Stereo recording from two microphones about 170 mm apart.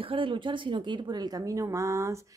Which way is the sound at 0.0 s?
30° right (ahead or behind).